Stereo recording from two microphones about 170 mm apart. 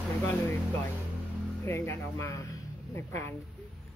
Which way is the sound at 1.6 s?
15° left (ahead or behind).